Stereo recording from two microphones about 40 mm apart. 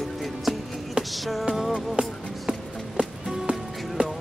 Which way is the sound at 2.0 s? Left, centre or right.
Right.